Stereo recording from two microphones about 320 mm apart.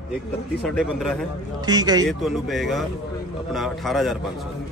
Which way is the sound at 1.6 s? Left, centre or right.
Centre.